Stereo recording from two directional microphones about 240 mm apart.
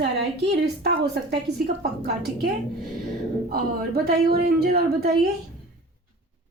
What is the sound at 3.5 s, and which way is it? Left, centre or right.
Speech, right.